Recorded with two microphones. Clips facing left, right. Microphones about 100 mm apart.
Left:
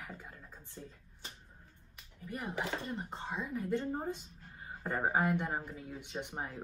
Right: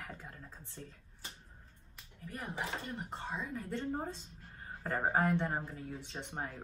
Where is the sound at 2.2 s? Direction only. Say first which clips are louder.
Left 2 dB; 20° left (ahead or behind).